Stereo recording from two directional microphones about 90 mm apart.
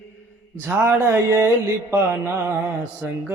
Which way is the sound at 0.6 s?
25° right (ahead or behind).